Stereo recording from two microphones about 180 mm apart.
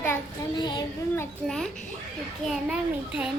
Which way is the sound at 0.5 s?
25° left (ahead or behind).